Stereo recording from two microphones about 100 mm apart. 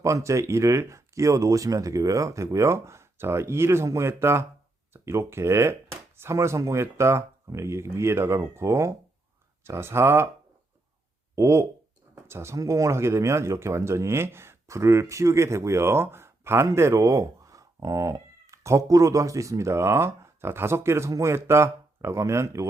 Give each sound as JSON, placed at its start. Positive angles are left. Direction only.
{"t": 0.0, "sound": "speech", "side_deg": -30}
{"t": 11.3, "sound": "speech", "side_deg": -30}